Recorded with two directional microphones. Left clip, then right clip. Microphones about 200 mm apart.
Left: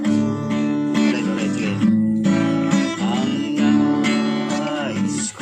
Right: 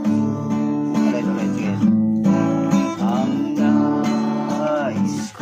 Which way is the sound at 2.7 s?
35° right (ahead or behind).